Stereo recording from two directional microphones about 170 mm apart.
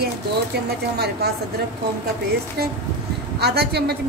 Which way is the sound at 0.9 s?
70° right (ahead or behind).